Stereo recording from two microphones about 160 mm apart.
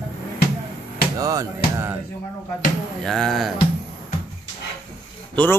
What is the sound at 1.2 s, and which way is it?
Music, 20° right (ahead or behind).